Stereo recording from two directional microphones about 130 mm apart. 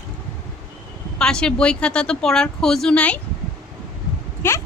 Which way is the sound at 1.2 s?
5° left (ahead or behind).